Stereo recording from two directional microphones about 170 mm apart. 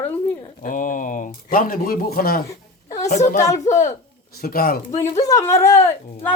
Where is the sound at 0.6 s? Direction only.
50° left (ahead or behind).